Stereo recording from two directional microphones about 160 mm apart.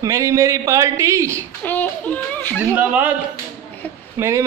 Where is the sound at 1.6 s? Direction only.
10° left (ahead or behind).